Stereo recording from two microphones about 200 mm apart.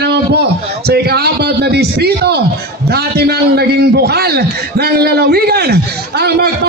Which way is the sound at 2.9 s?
50° right (ahead or behind).